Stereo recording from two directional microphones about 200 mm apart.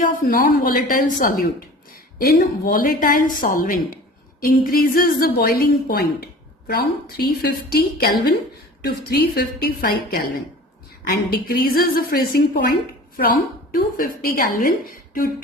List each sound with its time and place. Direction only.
0.0 s a woman's voice: 45° left (ahead or behind)
13.7 s a woman's voice: 45° left (ahead or behind)